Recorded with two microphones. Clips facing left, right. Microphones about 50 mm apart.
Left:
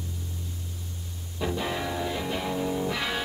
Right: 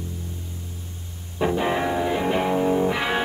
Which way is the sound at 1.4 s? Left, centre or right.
Right.